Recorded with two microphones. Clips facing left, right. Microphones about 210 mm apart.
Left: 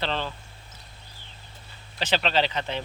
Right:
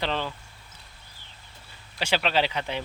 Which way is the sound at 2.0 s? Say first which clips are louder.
Even; 10° right (ahead or behind).